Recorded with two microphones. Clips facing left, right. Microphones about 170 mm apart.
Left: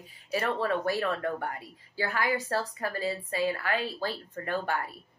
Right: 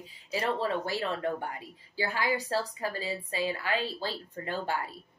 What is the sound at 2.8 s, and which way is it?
Speech, 40° left (ahead or behind).